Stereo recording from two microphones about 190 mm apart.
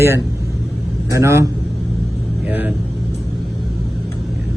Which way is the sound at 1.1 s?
15° right (ahead or behind).